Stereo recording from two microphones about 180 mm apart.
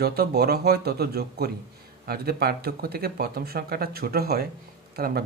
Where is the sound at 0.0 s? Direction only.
60° right (ahead or behind).